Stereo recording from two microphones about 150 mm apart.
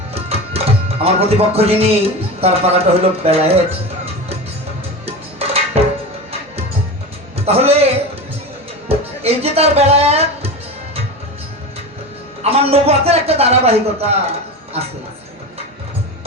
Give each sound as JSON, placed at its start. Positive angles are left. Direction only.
{"t": 0.1, "sound": "music", "side_deg": -40}
{"t": 5.0, "sound": "music", "side_deg": -40}
{"t": 7.3, "sound": "a man's voice", "side_deg": -40}
{"t": 8.9, "sound": "music", "side_deg": -40}
{"t": 12.4, "sound": "a man's voice", "side_deg": -40}